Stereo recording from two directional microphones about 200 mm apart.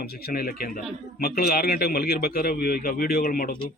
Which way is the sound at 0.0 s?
50° left (ahead or behind).